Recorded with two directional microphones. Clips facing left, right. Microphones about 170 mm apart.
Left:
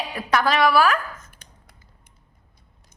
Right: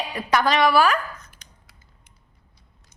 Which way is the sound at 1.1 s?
50° left (ahead or behind).